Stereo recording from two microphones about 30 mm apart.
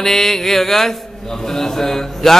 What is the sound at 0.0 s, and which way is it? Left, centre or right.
A man's voice, centre.